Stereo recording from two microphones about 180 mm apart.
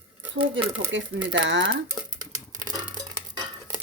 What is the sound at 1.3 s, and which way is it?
Speech, 80° right.